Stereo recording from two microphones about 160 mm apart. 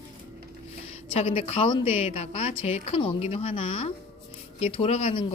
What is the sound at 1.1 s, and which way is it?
A woman's voice, 40° left (ahead or behind).